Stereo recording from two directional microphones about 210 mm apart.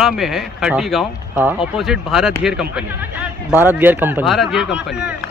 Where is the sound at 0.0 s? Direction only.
Centre (ahead or behind).